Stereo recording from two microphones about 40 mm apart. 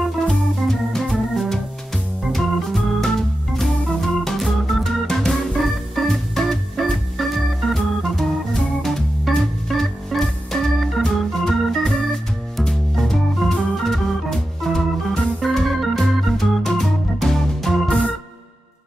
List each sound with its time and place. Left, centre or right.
0.2 s organ: centre
1.3 s music: centre
2.3 s organ: centre